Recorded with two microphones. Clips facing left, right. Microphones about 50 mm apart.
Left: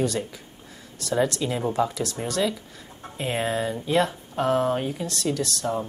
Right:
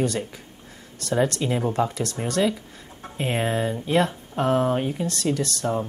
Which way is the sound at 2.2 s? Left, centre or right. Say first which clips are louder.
Right 4 dB; right.